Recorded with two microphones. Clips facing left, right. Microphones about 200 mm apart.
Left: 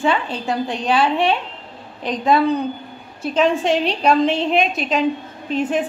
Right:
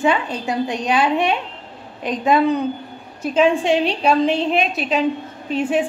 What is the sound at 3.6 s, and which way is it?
A woman's voice, 5° right (ahead or behind).